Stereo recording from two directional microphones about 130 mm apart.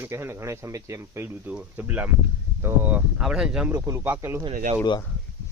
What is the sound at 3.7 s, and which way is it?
Speech, 20° right (ahead or behind).